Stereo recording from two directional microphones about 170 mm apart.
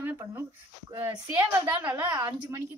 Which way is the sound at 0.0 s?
15° right (ahead or behind).